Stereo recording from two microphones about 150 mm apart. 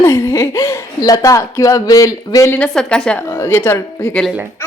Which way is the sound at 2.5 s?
5° left (ahead or behind).